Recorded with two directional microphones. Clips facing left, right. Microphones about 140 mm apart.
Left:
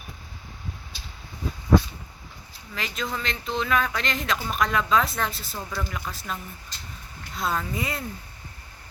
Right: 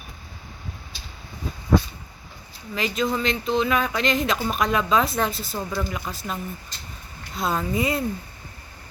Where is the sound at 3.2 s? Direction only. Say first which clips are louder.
Right 6 dB; 5° right (ahead or behind).